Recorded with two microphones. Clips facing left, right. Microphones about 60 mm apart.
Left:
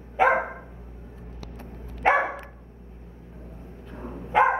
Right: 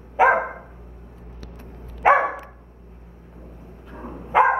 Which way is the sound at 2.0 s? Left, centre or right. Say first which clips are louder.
Right 5 dB; centre.